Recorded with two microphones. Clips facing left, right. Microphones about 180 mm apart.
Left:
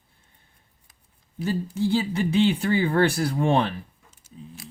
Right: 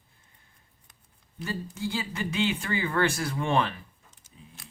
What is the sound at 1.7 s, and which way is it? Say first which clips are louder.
Speech: left 10 dB; 30° left (ahead or behind).